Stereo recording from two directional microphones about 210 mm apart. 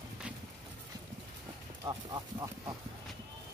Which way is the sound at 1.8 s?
15° right (ahead or behind).